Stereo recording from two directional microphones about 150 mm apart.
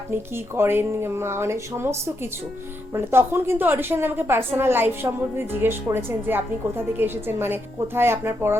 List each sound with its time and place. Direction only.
0.1 s a woman's voice: 15° right (ahead or behind)